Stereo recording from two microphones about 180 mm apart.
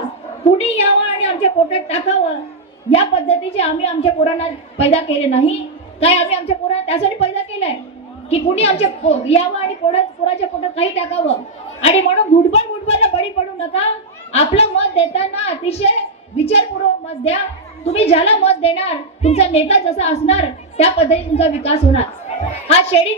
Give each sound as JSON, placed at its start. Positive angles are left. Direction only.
{"t": 0.6, "sound": "a woman's voice", "side_deg": 35}